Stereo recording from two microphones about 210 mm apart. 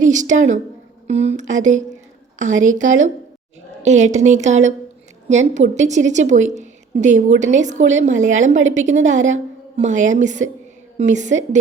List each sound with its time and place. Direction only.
0.0 s a woman's voice: 35° right (ahead or behind)